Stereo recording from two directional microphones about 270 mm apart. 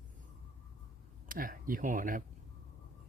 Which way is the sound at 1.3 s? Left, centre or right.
Right.